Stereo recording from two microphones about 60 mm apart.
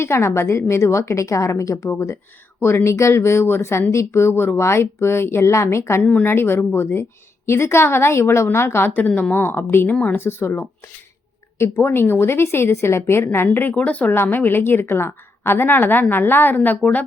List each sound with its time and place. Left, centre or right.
0.0 s speech: left
6.0 s speech: centre
6.2 s a woman's voice: left
9.9 s speech: left
10.2 s a woman's voice: left
11.5 s speech: left
11.9 s speech: left
13.7 s a woman's voice: left